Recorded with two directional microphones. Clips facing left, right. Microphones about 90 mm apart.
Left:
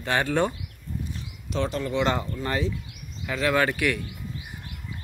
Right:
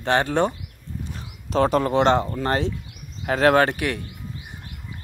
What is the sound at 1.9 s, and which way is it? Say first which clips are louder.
Speech: right 7 dB; 35° right (ahead or behind).